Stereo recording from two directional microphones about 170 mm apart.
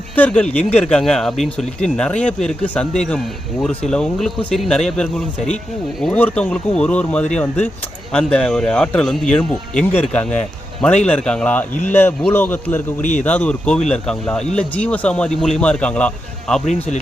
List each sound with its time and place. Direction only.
0.2 s speech: 5° left (ahead or behind)
13.0 s speech: 45° left (ahead or behind)
13.2 s speech: 5° left (ahead or behind)